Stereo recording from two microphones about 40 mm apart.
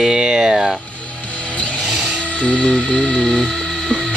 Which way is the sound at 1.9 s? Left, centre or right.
Centre.